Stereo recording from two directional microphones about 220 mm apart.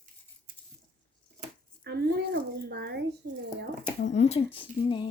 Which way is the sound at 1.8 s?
50° right (ahead or behind).